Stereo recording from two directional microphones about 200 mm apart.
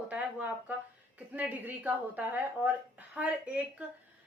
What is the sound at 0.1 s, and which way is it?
Speech, 5° right (ahead or behind).